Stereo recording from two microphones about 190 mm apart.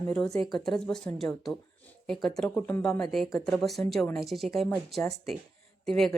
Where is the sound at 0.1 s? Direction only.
10° left (ahead or behind).